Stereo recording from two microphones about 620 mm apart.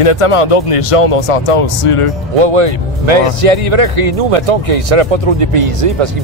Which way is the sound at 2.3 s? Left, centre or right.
Right.